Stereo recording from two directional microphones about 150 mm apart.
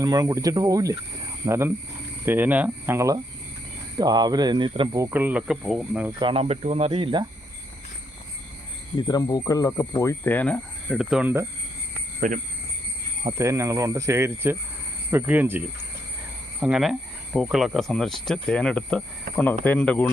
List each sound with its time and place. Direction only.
0.0 s speech: 25° right (ahead or behind)
5.1 s speech: 10° right (ahead or behind)
6.1 s speech: 35° right (ahead or behind)
6.4 s speech: 45° right (ahead or behind)
9.0 s speech: 30° left (ahead or behind); by 10.9 s 10° left (ahead or behind)
10.9 s speech: 5° right (ahead or behind)
12.2 s speech: 60° right (ahead or behind)
13.4 s speech: 20° right (ahead or behind); by 20.1 s 10° left (ahead or behind)